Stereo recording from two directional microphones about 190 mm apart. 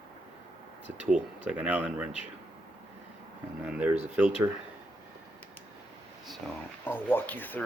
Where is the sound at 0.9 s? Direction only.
5° right (ahead or behind).